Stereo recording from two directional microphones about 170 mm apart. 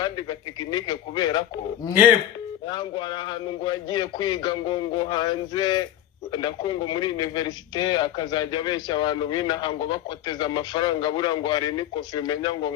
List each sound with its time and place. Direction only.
0.0 s speech: 25° left (ahead or behind)
1.9 s speech: 10° right (ahead or behind)
2.6 s speech: 25° left (ahead or behind)